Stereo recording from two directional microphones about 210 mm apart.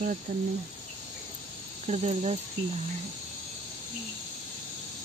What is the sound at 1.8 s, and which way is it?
Speech, 30° right (ahead or behind).